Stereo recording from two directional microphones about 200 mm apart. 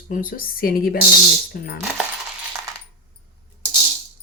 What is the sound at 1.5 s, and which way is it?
Coin, 50° left (ahead or behind).